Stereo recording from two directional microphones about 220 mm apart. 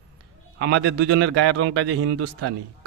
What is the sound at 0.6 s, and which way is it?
A man's voice, 75° right (ahead or behind).